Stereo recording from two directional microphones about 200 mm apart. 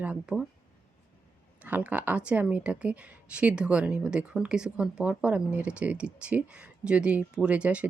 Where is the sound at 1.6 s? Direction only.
5° right (ahead or behind).